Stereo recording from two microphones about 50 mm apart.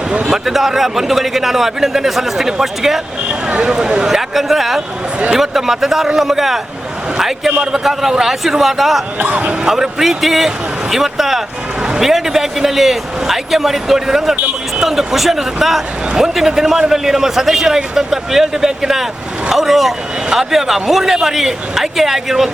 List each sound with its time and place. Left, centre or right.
0.1 s speech: centre
0.4 s a man's voice: centre
9.1 s speech: right
9.6 s a man's voice: centre